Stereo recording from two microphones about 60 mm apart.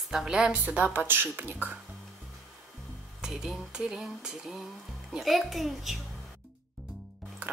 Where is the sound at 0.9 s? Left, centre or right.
Right.